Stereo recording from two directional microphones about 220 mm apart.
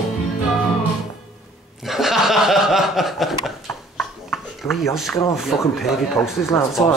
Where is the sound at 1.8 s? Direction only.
Centre (ahead or behind).